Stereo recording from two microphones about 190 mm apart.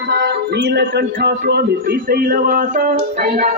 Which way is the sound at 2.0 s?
50° right (ahead or behind).